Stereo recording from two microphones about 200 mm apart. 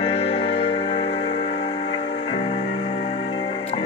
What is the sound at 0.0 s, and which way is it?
Music, 25° left (ahead or behind).